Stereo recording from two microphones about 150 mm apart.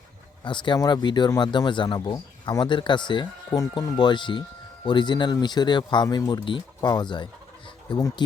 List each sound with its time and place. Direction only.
0.4 s speech: 30° left (ahead or behind)